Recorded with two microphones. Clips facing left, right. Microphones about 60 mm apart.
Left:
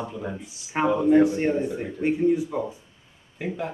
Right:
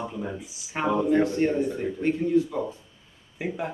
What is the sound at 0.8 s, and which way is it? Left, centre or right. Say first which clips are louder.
Speech: left 4 dB; centre.